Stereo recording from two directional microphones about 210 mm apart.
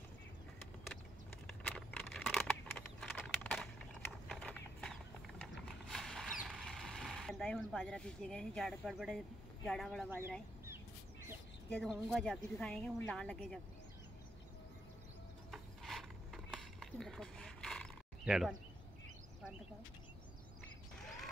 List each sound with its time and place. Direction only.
1.5 s a sound: 5° left (ahead or behind)
9.7 s speech: centre (ahead or behind)
11.7 s speech: centre (ahead or behind)
15.5 s mechanisms: centre (ahead or behind)